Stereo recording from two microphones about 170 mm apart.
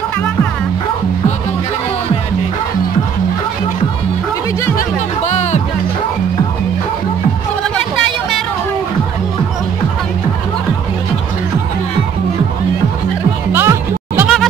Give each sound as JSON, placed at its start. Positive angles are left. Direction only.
{"t": 4.7, "sound": "music", "side_deg": 40}
{"t": 13.5, "sound": "music", "side_deg": -15}